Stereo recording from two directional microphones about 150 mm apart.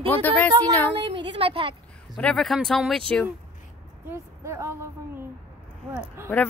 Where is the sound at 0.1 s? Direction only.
10° left (ahead or behind).